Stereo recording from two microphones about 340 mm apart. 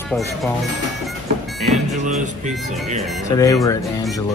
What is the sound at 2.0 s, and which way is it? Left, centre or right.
Speech, right.